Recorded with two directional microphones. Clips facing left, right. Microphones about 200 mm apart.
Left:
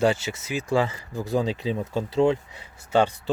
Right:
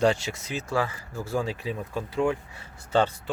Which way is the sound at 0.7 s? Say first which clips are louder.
Left 5 dB; 20° left (ahead or behind).